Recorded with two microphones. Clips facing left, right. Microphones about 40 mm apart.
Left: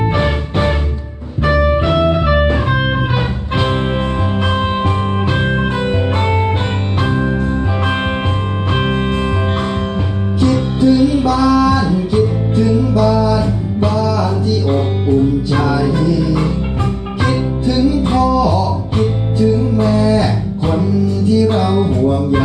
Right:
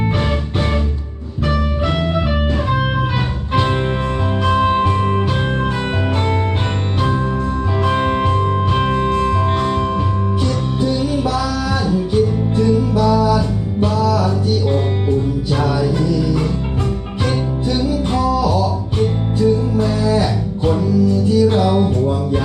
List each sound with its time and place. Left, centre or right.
2.3 s music: left
10.4 s music: centre
10.9 s music: centre
16.0 s music: centre
18.2 s music: centre
19.8 s music: left